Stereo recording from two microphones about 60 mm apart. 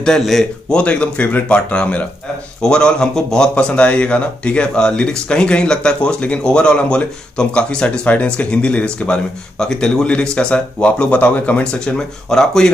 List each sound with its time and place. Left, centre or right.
0.2 s speech: centre
0.7 s speech: centre